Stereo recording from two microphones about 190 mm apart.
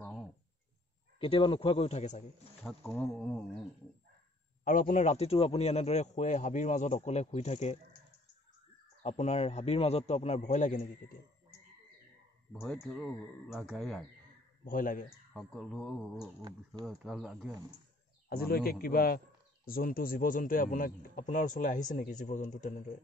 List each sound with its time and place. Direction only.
1.2 s a man's voice: 25° left (ahead or behind)
2.9 s speech: 5° left (ahead or behind)
4.6 s speech: 45° left (ahead or behind)
9.0 s speech: 35° left (ahead or behind)
12.5 s speech: centre (ahead or behind)
14.6 s a man's voice: 45° left (ahead or behind)
15.3 s speech: centre (ahead or behind)
16.3 s speech: 25° right (ahead or behind)
16.8 s speech: centre (ahead or behind)
18.3 s a man's voice: 55° left (ahead or behind)